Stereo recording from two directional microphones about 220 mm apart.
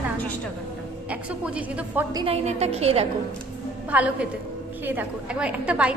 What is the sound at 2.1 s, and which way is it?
Speech, 25° right (ahead or behind).